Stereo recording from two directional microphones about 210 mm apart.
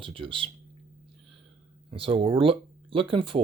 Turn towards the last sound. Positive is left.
turn(degrees=-25)  # may be behind; listen again after turning